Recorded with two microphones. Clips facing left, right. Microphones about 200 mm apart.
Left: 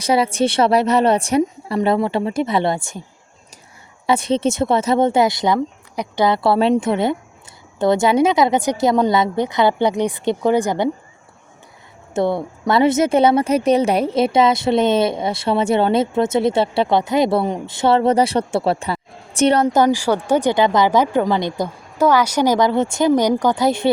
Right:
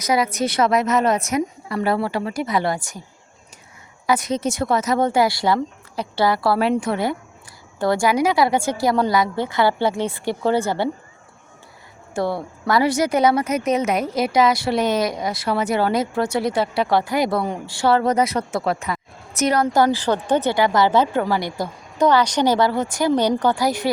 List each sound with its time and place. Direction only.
0.0 s a woman's voice: 30° left (ahead or behind)
4.0 s a woman's voice: 25° left (ahead or behind)
12.1 s a woman's voice: 20° left (ahead or behind)
19.6 s speech: 20° left (ahead or behind)
21.9 s speech: 5° left (ahead or behind)
23.6 s a woman's voice: 25° left (ahead or behind)